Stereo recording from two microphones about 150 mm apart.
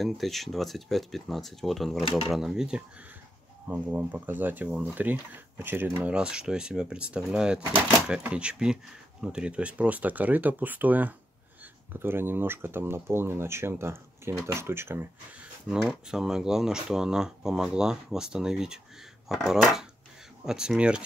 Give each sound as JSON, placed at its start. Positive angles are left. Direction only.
{"t": 0.0, "sound": "speech", "side_deg": 0}
{"t": 15.7, "sound": "speech", "side_deg": -5}